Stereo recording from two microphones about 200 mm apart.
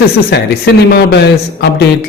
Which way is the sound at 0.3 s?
55° left (ahead or behind).